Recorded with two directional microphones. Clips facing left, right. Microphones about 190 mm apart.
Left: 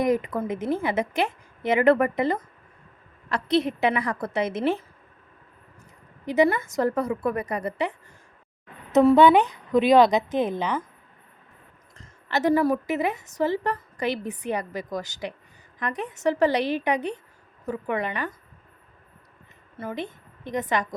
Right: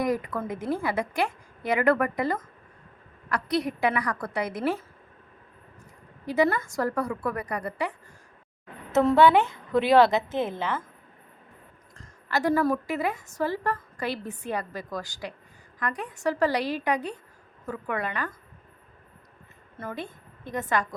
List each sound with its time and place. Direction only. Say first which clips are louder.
0.0 s a woman's voice: left 4 dB; 20° left (ahead or behind)
6.2 s a woman's voice: left 3 dB; 20° left (ahead or behind)
11.9 s a sound: left 2 dB; 20° left (ahead or behind)
12.6 s a woman's voice: left 3 dB; 15° left (ahead or behind)
19.8 s a woman's voice: left 3 dB; 15° left (ahead or behind)